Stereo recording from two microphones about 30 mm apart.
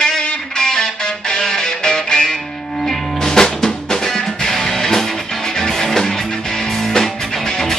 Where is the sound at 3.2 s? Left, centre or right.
Centre.